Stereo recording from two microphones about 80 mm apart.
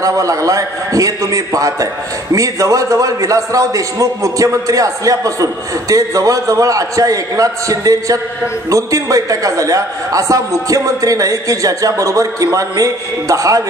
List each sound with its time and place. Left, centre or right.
0.0 s a man's voice: right